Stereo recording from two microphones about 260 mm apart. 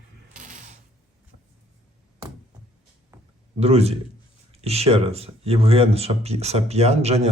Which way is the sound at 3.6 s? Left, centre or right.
Right.